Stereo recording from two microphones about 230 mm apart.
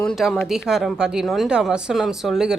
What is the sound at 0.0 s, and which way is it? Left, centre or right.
A woman's voice, centre.